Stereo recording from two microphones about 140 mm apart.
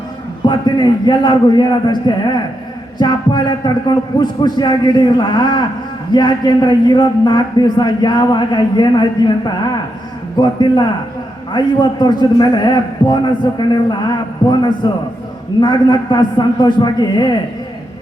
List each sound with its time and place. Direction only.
0.4 s a man's voice: 30° left (ahead or behind)